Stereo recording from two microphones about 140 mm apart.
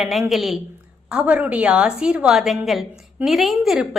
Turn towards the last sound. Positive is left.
turn(degrees=-5)  # may be behind; listen again after turning